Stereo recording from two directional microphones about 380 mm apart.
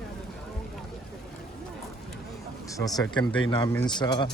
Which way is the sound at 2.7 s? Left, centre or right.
Centre.